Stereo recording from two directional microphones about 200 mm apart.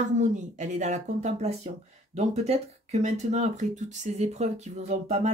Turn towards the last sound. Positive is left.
turn(degrees=-35)  # may be behind; listen again after turning